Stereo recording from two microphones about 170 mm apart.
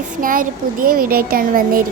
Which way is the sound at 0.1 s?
55° right (ahead or behind).